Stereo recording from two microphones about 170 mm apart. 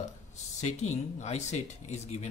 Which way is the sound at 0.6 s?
40° left (ahead or behind).